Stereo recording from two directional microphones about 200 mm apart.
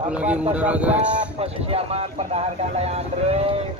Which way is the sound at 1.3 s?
30° right (ahead or behind).